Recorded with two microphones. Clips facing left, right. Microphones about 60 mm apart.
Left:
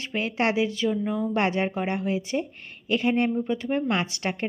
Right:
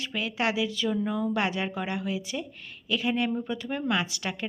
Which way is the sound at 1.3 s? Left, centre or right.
Left.